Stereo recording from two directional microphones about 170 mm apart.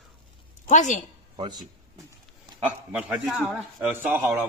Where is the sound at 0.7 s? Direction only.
45° left (ahead or behind).